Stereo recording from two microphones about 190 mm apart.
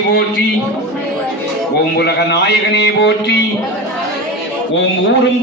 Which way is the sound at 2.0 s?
60° left (ahead or behind).